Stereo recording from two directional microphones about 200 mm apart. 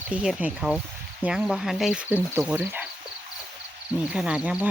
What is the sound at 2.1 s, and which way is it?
Cricket, 10° right (ahead or behind).